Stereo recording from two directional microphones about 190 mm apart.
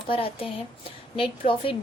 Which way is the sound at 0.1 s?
30° left (ahead or behind).